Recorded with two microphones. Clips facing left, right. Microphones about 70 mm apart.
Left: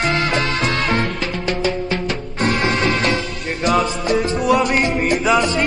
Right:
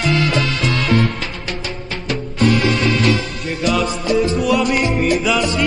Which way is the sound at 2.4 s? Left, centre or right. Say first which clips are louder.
Right 2 dB; left.